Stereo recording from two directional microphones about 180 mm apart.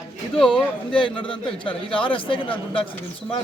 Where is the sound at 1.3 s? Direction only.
30° left (ahead or behind).